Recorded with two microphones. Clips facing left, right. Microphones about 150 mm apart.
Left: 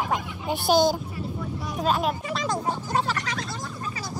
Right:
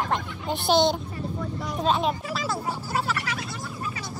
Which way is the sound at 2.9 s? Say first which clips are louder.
Left 1 dB; 35° left (ahead or behind).